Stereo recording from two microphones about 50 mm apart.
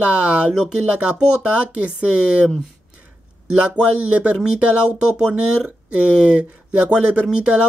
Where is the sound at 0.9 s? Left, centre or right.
Right.